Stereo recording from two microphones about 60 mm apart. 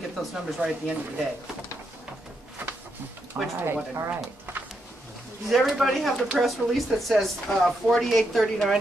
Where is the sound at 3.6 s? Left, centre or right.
Right.